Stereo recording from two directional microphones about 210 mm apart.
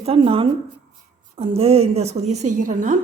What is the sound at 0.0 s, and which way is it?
A woman's voice, 25° right (ahead or behind).